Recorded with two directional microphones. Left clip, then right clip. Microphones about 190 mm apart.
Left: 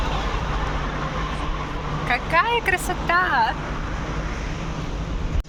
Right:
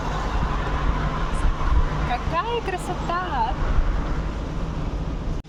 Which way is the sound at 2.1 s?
10° left (ahead or behind).